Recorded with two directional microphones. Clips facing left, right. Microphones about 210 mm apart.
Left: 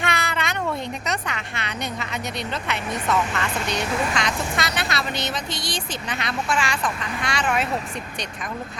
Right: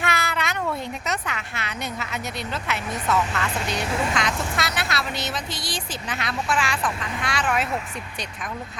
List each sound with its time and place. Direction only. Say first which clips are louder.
0.0 s cat: even; 5° right (ahead or behind)
1.0 s speech: left 1 dB; 5° right (ahead or behind)